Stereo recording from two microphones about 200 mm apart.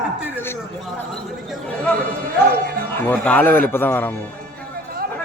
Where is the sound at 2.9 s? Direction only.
10° left (ahead or behind).